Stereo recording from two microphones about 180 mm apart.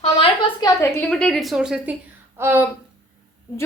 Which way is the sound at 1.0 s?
5° left (ahead or behind).